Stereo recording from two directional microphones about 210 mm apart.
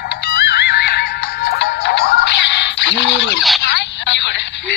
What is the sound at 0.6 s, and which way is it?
Music, 55° left (ahead or behind).